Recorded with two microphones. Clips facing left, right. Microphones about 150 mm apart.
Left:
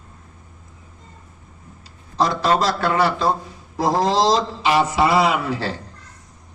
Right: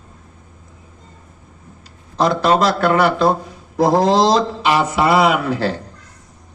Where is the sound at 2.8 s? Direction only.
60° right (ahead or behind).